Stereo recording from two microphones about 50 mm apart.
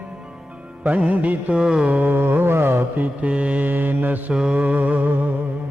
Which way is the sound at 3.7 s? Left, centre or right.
Right.